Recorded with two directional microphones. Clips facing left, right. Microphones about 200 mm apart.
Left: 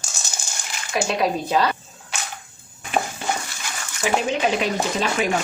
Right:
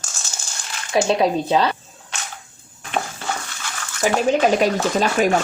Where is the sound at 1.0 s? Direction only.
25° right (ahead or behind).